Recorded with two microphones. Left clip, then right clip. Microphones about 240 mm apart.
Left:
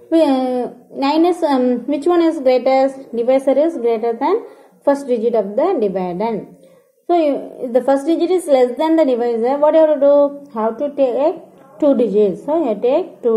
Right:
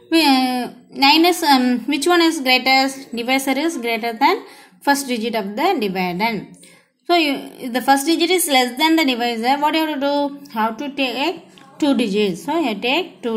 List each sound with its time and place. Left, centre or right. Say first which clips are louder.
0.1 s a woman's voice: left 1 dB; right